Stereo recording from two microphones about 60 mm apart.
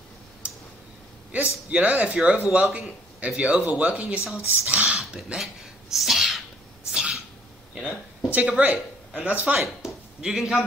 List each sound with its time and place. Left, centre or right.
1.3 s speech: right
5.9 s sneeze: centre
6.9 s sneeze: centre
8.3 s speech: right
9.8 s a sound: centre
10.2 s a man's voice: centre